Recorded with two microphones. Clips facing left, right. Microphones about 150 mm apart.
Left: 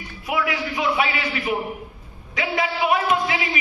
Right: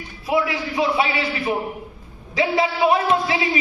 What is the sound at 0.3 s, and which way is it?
A man's voice, 30° right (ahead or behind).